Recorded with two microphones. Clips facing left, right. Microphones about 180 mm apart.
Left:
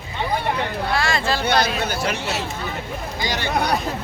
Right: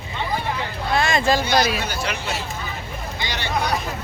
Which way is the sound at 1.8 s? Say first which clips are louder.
Left 3 dB; 50° left (ahead or behind).